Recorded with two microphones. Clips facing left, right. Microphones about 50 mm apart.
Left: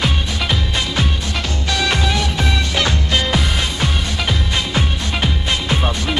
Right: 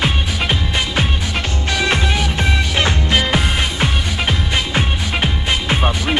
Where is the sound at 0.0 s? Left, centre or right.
Right.